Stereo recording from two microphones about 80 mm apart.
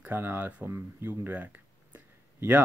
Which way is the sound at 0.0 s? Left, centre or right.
Right.